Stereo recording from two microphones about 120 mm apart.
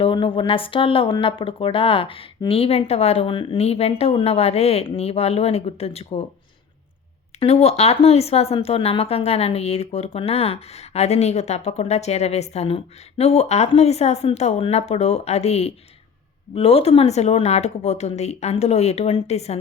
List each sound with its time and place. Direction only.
0.0 s speech: 45° left (ahead or behind)
3.6 s speech: 60° left (ahead or behind)
7.3 s speech: 60° left (ahead or behind)